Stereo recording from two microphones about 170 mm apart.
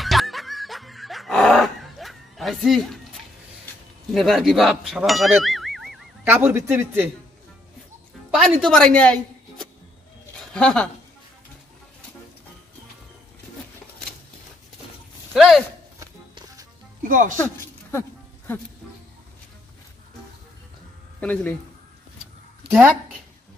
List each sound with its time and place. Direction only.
0.0 s snicker: centre (ahead or behind)
4.1 s speech: centre (ahead or behind)
6.2 s speech: 15° right (ahead or behind)
8.3 s a woman's voice: centre (ahead or behind)
15.3 s a sound: centre (ahead or behind)
17.0 s speech: 50° right (ahead or behind)
21.2 s speech: 10° left (ahead or behind)
22.7 s speech: 5° right (ahead or behind)